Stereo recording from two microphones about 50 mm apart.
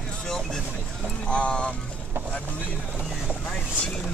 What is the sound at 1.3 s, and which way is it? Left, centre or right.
Speech, left.